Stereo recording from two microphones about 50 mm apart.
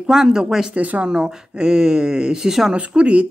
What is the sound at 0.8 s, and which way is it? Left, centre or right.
Speech, right.